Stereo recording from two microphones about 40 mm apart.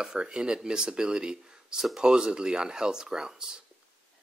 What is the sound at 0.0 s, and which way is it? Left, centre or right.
Speech, right.